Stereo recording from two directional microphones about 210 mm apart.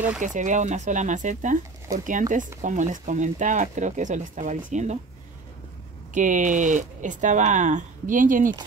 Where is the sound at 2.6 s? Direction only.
35° right (ahead or behind).